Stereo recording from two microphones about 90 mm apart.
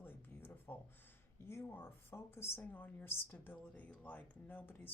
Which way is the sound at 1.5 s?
30° left (ahead or behind).